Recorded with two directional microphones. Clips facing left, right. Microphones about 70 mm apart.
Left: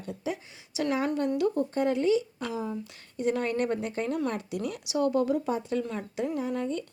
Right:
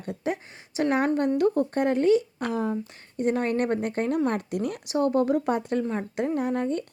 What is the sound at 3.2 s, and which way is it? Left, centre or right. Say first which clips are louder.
Speech: right 3 dB; right.